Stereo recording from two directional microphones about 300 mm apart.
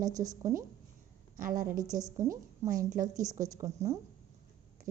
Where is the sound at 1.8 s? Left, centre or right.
Centre.